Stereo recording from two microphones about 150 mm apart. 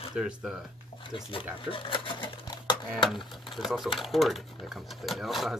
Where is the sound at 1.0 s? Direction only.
35° left (ahead or behind).